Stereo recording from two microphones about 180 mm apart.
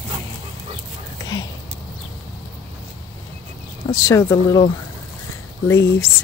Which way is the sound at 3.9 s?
20° left (ahead or behind).